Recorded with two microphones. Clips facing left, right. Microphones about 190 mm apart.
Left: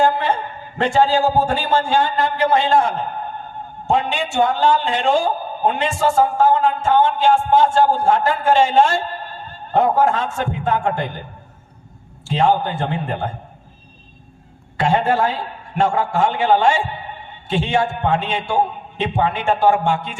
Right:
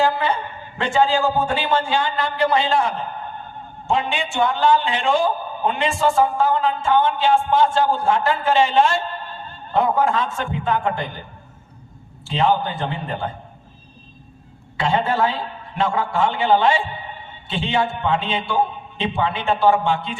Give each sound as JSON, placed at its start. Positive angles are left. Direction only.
{"t": 0.0, "sound": "a sound", "side_deg": 45}
{"t": 0.8, "sound": "a man's voice", "side_deg": 40}
{"t": 12.3, "sound": "a man's voice", "side_deg": 45}
{"t": 14.8, "sound": "a man's voice", "side_deg": 45}